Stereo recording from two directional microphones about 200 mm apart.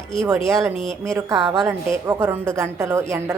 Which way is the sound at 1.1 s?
15° right (ahead or behind).